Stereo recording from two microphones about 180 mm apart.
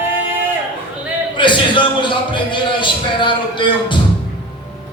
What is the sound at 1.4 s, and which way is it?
A man's voice, 25° left (ahead or behind).